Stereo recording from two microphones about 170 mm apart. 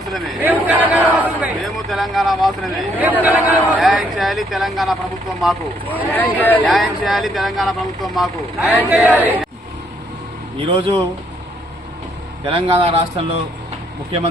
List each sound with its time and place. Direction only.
0.4 s a man's voice: 10° right (ahead or behind)
5.9 s speech: 10° left (ahead or behind)
6.7 s speech: centre (ahead or behind)
8.6 s speech: 10° left (ahead or behind)
8.9 s a man's voice: 5° right (ahead or behind)
10.8 s speech: 30° right (ahead or behind)
12.5 s a man's voice: 30° right (ahead or behind)